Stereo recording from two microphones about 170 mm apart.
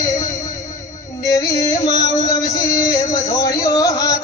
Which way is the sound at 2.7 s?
20° left (ahead or behind).